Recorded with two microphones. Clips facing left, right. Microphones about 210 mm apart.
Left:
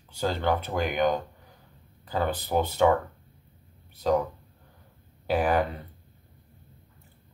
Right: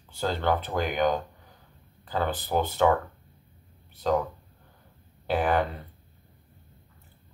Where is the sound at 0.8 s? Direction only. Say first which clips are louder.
Left 1 dB; centre (ahead or behind).